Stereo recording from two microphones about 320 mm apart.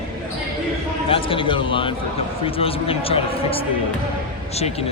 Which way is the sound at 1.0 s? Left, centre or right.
Centre.